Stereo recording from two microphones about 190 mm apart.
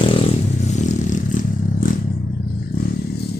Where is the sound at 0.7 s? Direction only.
40° left (ahead or behind).